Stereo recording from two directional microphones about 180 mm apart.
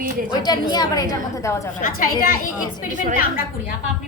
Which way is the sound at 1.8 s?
50° left (ahead or behind).